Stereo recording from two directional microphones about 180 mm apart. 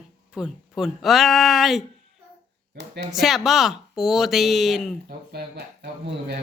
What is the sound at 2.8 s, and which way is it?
Speech, 70° right (ahead or behind).